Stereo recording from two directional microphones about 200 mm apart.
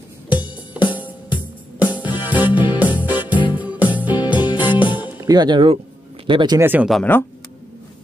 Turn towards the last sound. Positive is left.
turn(degrees=5)  # may be behind; listen again after turning